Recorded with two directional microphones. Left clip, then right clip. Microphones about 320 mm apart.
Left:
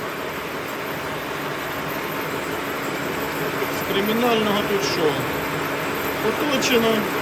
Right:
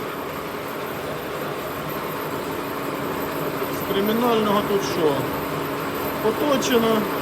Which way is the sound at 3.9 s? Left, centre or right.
Centre.